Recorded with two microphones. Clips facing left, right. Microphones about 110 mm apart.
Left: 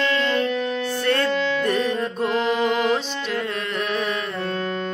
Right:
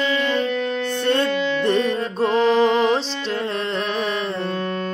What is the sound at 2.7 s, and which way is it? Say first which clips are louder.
Carnatic music: right 3 dB; 30° right (ahead or behind).